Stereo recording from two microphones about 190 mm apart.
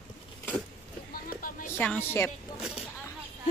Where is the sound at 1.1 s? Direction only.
45° left (ahead or behind).